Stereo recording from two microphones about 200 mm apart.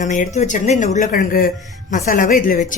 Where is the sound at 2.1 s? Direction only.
40° left (ahead or behind).